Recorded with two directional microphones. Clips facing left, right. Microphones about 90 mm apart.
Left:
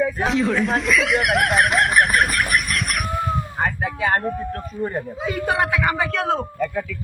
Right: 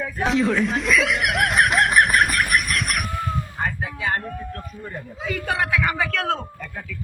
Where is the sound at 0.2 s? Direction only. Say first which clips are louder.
Even; centre (ahead or behind).